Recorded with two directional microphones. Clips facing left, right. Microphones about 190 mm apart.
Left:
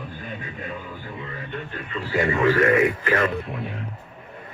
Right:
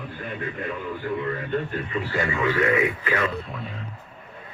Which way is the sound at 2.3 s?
45° left (ahead or behind).